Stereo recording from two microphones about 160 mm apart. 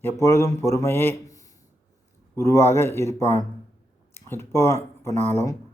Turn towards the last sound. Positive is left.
turn(degrees=15)  # may be behind; listen again after turning